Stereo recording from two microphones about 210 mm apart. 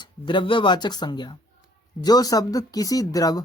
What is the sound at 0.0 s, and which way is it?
Speech, 20° left (ahead or behind).